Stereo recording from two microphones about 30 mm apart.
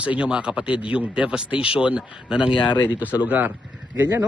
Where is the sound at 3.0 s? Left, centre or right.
Right.